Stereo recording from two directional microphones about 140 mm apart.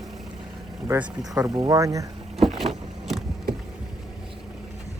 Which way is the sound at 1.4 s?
25° right (ahead or behind).